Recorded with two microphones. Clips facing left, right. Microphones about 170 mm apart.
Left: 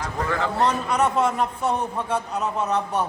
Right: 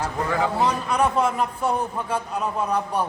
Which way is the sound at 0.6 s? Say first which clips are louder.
Left 3 dB; 5° right (ahead or behind).